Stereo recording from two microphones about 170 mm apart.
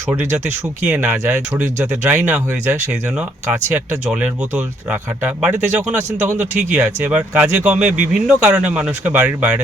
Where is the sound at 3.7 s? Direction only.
10° right (ahead or behind).